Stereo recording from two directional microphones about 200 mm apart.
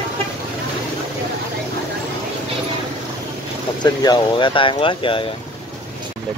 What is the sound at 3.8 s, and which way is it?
Speech, 20° left (ahead or behind).